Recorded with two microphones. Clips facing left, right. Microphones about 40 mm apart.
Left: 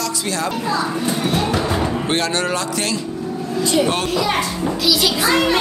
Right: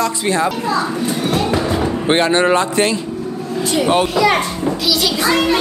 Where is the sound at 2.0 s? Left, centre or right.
Right.